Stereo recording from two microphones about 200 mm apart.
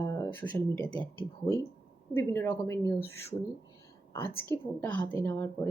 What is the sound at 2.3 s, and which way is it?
Speech, 10° left (ahead or behind).